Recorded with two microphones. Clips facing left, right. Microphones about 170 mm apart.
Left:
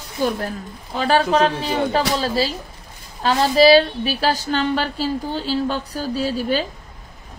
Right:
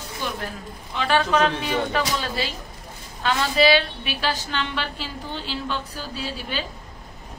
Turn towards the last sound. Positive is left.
turn(degrees=40)  # may be behind; listen again after turning